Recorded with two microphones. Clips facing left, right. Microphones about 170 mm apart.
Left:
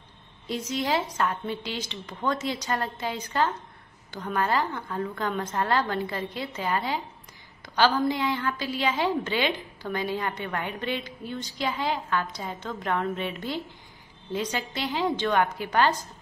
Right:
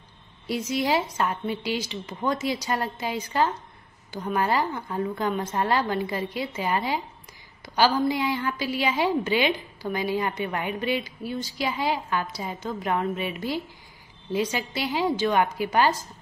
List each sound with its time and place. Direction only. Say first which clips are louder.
0.5 s a woman's voice: right 3 dB; 10° right (ahead or behind)